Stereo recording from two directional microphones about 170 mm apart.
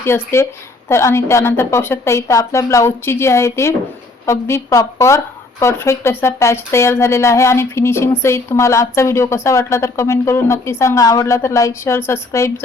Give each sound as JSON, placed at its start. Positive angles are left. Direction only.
{"t": 0.0, "sound": "speech", "side_deg": 15}